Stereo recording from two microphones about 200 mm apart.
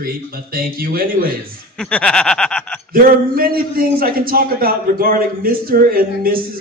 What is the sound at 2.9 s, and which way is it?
A man's voice, 45° right (ahead or behind).